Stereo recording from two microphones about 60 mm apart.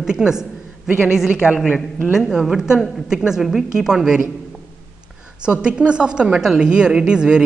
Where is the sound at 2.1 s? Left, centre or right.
Centre.